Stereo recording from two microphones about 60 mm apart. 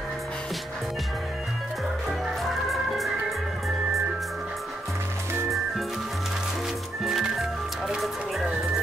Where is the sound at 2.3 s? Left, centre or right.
Centre.